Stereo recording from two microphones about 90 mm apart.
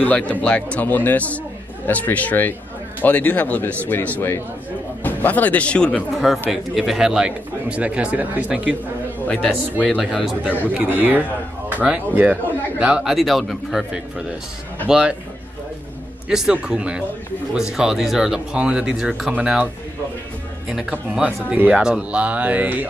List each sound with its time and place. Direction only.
0.0 s speech: 15° left (ahead or behind)
6.5 s speech: centre (ahead or behind)
9.3 s speech: 15° left (ahead or behind)
9.8 s speech: centre (ahead or behind)
10.8 s speech: 20° right (ahead or behind)
16.3 s speech: 5° right (ahead or behind)
21.1 s speech: 15° right (ahead or behind)